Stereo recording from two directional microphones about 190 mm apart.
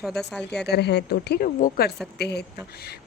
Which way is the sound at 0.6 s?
60° left (ahead or behind).